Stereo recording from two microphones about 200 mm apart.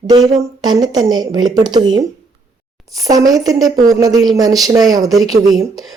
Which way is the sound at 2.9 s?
15° right (ahead or behind).